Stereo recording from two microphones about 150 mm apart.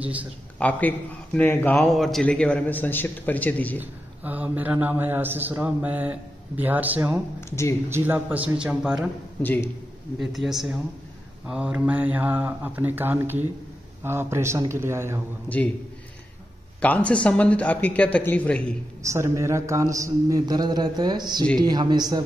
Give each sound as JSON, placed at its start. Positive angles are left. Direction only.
{"t": 0.0, "sound": "a man's voice", "side_deg": -10}
{"t": 0.6, "sound": "a man's voice", "side_deg": 10}
{"t": 3.8, "sound": "a man's voice", "side_deg": -10}
{"t": 7.3, "sound": "a man's voice", "side_deg": 20}
{"t": 7.9, "sound": "a man's voice", "side_deg": -15}
{"t": 9.4, "sound": "a man's voice", "side_deg": 10}
{"t": 10.1, "sound": "a man's voice", "side_deg": 0}
{"t": 15.4, "sound": "a man's voice", "side_deg": 10}
{"t": 17.1, "sound": "a man's voice", "side_deg": 10}
{"t": 19.0, "sound": "a man's voice", "side_deg": -20}